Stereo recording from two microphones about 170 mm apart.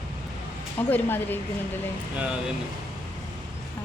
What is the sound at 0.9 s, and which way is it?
Speech, 10° left (ahead or behind).